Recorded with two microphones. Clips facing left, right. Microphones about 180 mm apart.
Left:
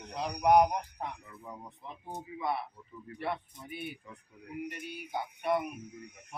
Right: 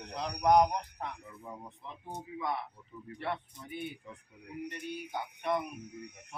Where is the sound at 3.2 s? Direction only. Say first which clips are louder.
Left 1 dB; 10° left (ahead or behind).